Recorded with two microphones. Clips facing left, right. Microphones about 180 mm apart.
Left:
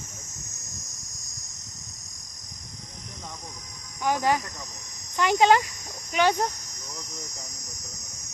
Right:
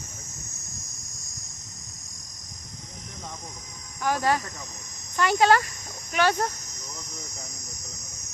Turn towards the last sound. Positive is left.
turn(degrees=15)  # may be behind; listen again after turning